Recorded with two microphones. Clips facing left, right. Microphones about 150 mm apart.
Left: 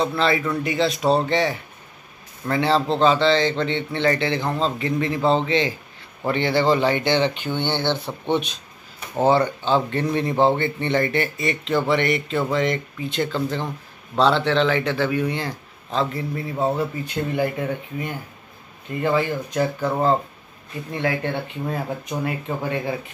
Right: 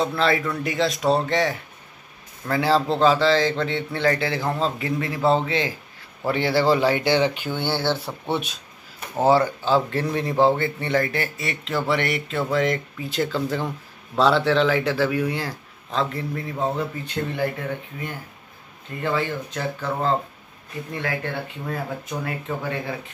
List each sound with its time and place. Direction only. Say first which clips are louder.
0.0 s speech: left 1 dB; centre (ahead or behind); by 22.9 s 15° left (ahead or behind)